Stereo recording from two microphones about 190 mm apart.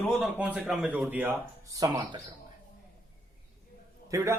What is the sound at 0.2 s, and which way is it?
Speech, 5° right (ahead or behind).